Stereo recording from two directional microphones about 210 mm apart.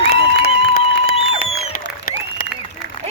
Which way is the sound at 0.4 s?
45° left (ahead or behind).